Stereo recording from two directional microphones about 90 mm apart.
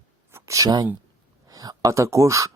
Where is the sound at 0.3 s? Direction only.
30° right (ahead or behind).